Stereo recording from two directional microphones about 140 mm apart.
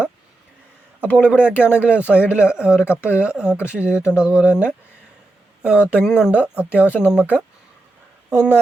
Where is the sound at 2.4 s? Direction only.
5° right (ahead or behind).